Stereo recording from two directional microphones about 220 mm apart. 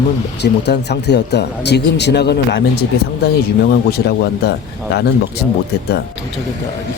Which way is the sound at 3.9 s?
50° left (ahead or behind).